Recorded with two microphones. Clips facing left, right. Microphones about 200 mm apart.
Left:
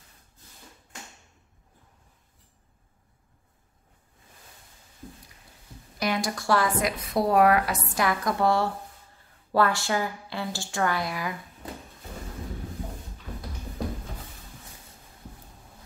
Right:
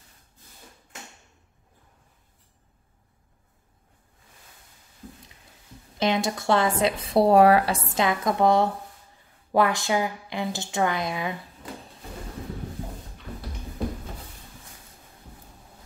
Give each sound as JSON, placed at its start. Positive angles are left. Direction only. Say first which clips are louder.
{"t": 5.9, "sound": "speech", "louder": "right 4 dB", "side_deg": -25}